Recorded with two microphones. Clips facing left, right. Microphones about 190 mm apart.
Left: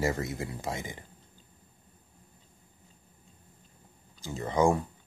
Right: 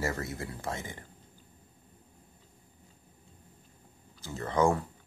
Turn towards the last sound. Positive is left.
turn(degrees=15)  # may be behind; listen again after turning